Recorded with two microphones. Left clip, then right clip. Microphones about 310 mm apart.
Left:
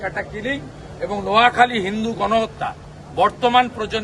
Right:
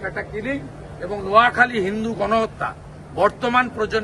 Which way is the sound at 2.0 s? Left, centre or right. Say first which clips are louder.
Left 2 dB; centre.